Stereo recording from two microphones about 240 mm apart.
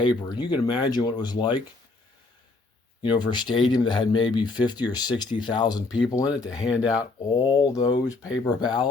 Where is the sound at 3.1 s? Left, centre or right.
Centre.